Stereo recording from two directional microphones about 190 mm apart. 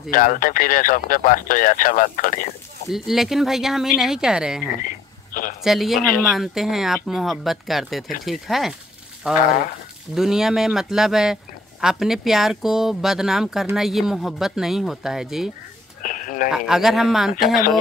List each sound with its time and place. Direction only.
0.1 s speech: 45° left (ahead or behind)
2.9 s speech: centre (ahead or behind)
4.8 s radio: 50° left (ahead or behind)
5.6 s speech: centre (ahead or behind)
16.0 s a sound: 45° left (ahead or behind)
16.5 s speech: centre (ahead or behind)